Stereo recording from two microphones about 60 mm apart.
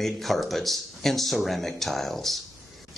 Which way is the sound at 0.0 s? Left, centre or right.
Centre.